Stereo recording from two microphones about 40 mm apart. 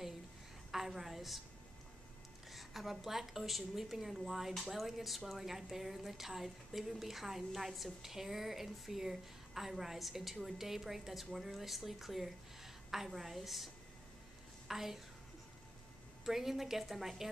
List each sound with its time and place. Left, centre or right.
0.7 s a woman's voice: centre
2.5 s a woman's voice: centre
14.7 s a child's voice: centre
16.3 s a woman's voice: centre